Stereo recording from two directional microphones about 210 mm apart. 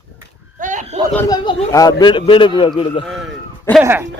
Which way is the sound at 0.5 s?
35° right (ahead or behind).